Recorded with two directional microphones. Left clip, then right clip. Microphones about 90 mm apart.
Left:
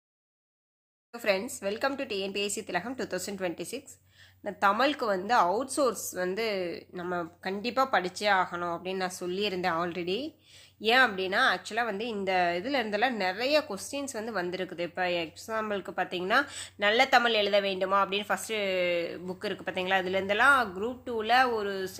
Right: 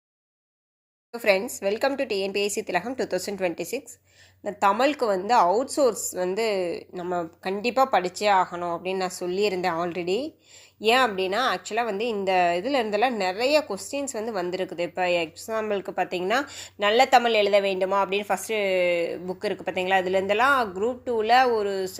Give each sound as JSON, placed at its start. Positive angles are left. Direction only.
{"t": 1.1, "sound": "a woman's voice", "side_deg": -40}
{"t": 4.7, "sound": "a woman's voice", "side_deg": -30}